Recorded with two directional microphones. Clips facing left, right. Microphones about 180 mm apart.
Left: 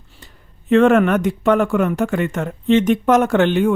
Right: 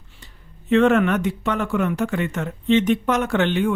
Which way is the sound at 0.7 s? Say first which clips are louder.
Left 4 dB; 50° left (ahead or behind).